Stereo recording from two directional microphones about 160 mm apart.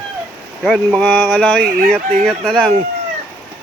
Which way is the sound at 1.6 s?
65° right (ahead or behind).